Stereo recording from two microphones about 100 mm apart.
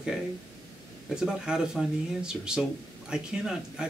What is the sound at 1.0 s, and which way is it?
Speech, 5° right (ahead or behind).